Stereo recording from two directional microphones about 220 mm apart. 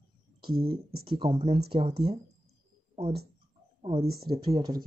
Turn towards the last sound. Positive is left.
turn(degrees=-20)  # may be behind; listen again after turning